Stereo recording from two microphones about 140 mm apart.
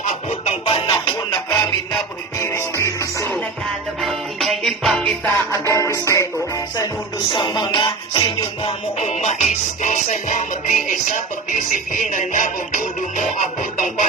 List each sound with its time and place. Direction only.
0.0 s music: 55° left (ahead or behind); by 3.3 s 20° left (ahead or behind)
4.0 s music: centre (ahead or behind)
5.5 s music: 20° left (ahead or behind); by 9.0 s 40° left (ahead or behind)
9.0 s music: 55° left (ahead or behind)